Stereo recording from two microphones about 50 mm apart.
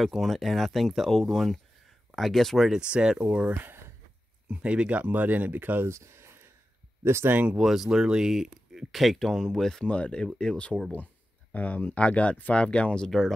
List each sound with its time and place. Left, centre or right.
0.0 s speech: centre
2.8 s speech: centre; by 5.9 s right
5.9 s a sound: right
7.0 s speech: right
7.6 s speech: centre
9.8 s speech: left
11.5 s speech: left; by 13.3 s centre